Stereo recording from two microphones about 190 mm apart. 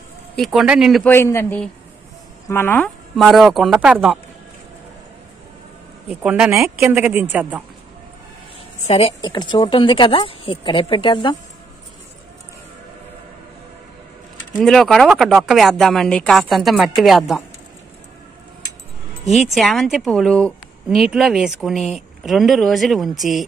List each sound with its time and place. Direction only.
0.4 s a woman's voice: centre (ahead or behind)
1.0 s a man's voice: 10° left (ahead or behind); by 4.2 s 5° right (ahead or behind)
6.0 s a woman's voice: 5° right (ahead or behind)
8.8 s speech: 30° left (ahead or behind)
14.6 s a woman's voice: centre (ahead or behind)
19.3 s a woman's voice: centre (ahead or behind)